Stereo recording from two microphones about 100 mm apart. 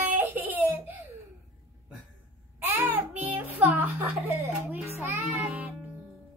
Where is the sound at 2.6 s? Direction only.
30° right (ahead or behind).